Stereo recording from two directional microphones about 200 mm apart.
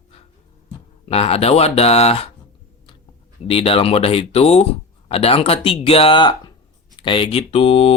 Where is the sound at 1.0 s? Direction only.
30° left (ahead or behind).